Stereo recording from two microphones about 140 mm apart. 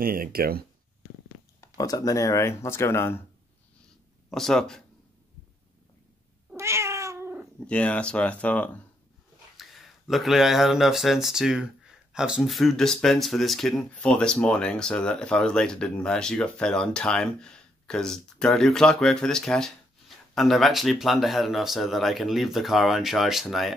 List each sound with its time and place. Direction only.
0.0 s speech: 90° right
1.8 s speech: 25° left (ahead or behind)
4.3 s speech: centre (ahead or behind)
6.5 s cat: 20° right (ahead or behind)
7.6 s speech: 10° left (ahead or behind)
9.6 s speech: centre (ahead or behind)